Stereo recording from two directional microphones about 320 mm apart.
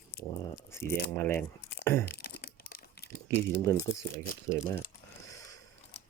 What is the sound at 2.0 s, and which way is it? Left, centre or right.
Crumpling, left.